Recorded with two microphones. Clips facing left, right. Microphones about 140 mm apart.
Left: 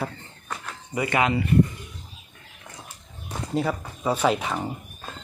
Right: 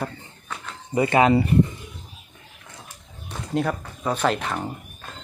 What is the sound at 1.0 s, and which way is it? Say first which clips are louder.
Speech: right 6 dB; 30° right (ahead or behind).